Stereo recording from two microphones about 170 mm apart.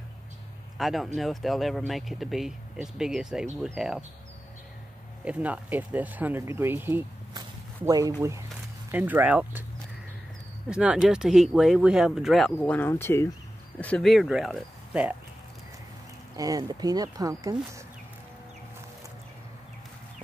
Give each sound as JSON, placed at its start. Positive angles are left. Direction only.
{"t": 0.7, "sound": "speech", "side_deg": 0}
{"t": 5.2, "sound": "speech", "side_deg": -10}
{"t": 10.7, "sound": "speech", "side_deg": -5}
{"t": 12.5, "sound": "speech", "side_deg": 10}
{"t": 16.3, "sound": "speech", "side_deg": -20}